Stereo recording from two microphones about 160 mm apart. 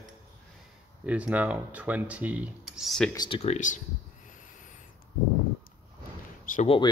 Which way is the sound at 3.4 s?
50° left (ahead or behind).